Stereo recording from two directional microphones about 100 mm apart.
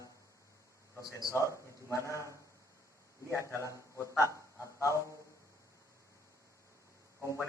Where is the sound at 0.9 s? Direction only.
30° left (ahead or behind).